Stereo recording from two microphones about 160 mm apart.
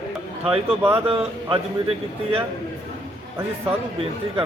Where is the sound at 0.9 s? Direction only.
35° right (ahead or behind).